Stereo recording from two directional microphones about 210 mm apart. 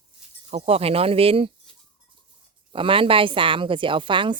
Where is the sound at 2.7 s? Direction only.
25° right (ahead or behind).